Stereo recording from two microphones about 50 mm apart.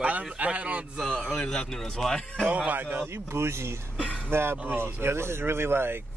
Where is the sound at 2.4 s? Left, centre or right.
Right.